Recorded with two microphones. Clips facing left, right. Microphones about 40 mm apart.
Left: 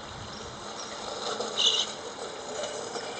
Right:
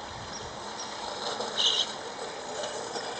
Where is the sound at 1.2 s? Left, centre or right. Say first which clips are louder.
Left 1 dB; left.